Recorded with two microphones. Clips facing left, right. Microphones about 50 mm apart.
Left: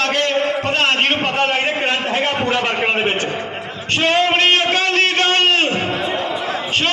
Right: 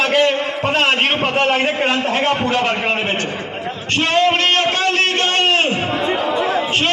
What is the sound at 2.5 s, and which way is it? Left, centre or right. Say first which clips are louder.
Speech: even; centre.